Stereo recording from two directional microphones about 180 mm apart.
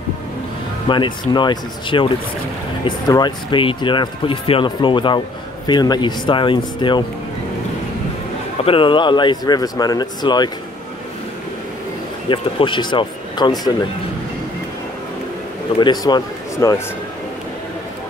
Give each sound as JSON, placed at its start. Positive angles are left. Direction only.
{"t": 0.8, "sound": "speech", "side_deg": 25}
{"t": 8.6, "sound": "speech", "side_deg": 30}
{"t": 12.3, "sound": "speech", "side_deg": 30}
{"t": 15.8, "sound": "a man's voice", "side_deg": 25}